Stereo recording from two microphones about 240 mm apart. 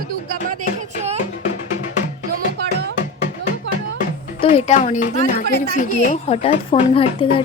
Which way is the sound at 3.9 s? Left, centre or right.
Left.